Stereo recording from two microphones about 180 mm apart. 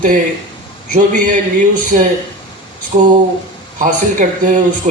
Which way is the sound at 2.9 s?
45° right (ahead or behind).